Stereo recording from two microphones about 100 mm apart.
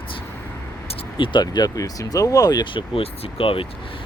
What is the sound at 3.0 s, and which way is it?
Speech, 75° left (ahead or behind).